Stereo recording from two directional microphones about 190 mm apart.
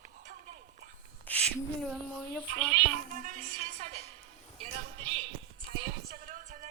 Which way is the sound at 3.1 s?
45° right (ahead or behind).